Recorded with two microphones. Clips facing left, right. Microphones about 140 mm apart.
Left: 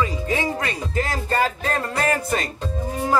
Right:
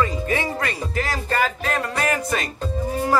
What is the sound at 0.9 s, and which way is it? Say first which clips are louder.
Speech: left 1 dB; 30° left (ahead or behind).